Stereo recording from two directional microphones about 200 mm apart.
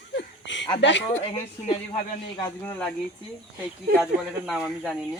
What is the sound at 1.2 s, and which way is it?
Speech, 30° left (ahead or behind).